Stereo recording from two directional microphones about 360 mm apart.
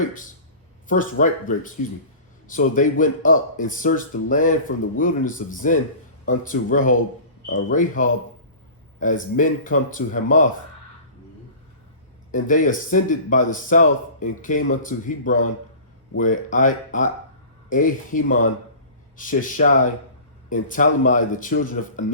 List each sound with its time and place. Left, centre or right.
1.2 s speech: left
12.3 s speech: left